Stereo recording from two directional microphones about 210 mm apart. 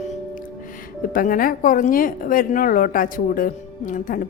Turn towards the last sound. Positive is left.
turn(degrees=40)  # may be behind; listen again after turning